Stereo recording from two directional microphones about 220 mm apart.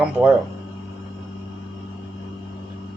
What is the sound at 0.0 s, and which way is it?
Speech, 5° right (ahead or behind).